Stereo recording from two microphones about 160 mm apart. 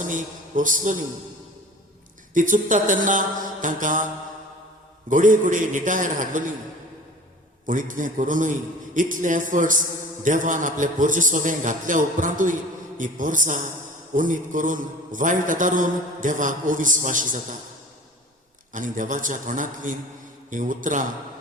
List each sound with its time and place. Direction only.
0.0 s a man's voice: 55° right (ahead or behind)
2.3 s a man's voice: 55° right (ahead or behind)
5.0 s a man's voice: 55° right (ahead or behind)
7.7 s a man's voice: 55° right (ahead or behind)
18.7 s a man's voice: 55° right (ahead or behind)